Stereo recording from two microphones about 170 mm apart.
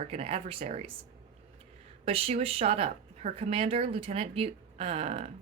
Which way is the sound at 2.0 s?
35° right (ahead or behind).